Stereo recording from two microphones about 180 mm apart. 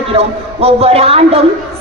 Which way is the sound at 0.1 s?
35° right (ahead or behind).